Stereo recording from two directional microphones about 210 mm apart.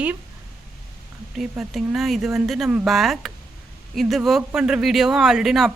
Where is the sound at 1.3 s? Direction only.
Centre (ahead or behind).